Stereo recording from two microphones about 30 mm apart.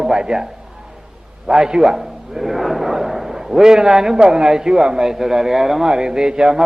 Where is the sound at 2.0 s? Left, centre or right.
Centre.